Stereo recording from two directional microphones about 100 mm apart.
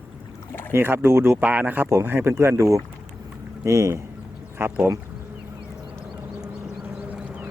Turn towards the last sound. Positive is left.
turn(degrees=-15)  # may be behind; listen again after turning